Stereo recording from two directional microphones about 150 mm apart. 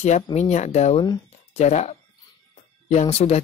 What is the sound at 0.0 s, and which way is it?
Speech, 50° left (ahead or behind).